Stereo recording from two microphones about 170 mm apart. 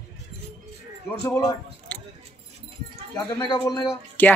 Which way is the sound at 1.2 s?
20° left (ahead or behind).